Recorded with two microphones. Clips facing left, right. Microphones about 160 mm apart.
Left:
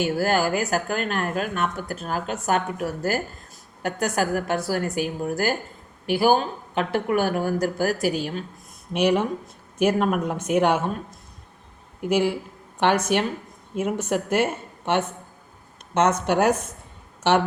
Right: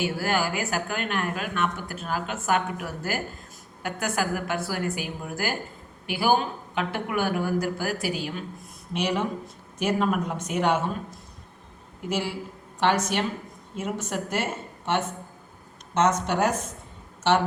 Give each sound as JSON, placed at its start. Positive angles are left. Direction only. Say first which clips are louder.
{"t": 0.0, "sound": "a woman's voice", "louder": "left 4 dB", "side_deg": 45}
{"t": 8.9, "sound": "speech", "louder": "left 6 dB", "side_deg": 55}
{"t": 12.0, "sound": "speech", "louder": "left 7 dB", "side_deg": 55}
{"t": 16.0, "sound": "speech", "louder": "left 3 dB", "side_deg": 60}